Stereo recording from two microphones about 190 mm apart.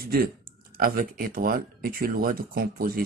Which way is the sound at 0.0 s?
55° right (ahead or behind).